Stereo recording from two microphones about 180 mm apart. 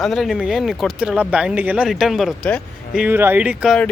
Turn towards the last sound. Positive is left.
turn(degrees=0)  # may be behind; listen again after turning